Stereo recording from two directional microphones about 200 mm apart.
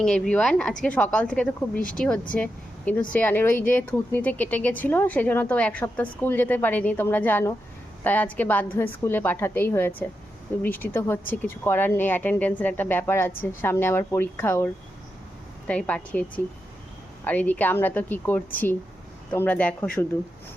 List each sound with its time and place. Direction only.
0.0 s speech: 5° left (ahead or behind)